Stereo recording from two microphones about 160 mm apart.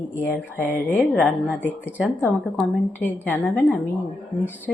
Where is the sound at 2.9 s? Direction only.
10° left (ahead or behind).